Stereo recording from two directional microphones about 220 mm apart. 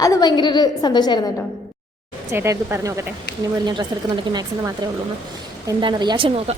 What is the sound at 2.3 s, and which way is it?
Speech, 10° right (ahead or behind).